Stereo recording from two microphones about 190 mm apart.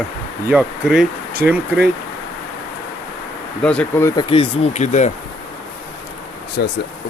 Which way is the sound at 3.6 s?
5° left (ahead or behind).